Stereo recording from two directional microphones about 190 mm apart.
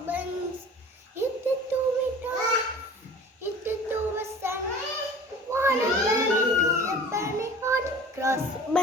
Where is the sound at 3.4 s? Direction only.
10° right (ahead or behind).